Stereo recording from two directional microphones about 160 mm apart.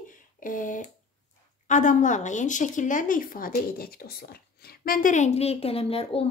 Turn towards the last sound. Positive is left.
turn(degrees=35)  # may be behind; listen again after turning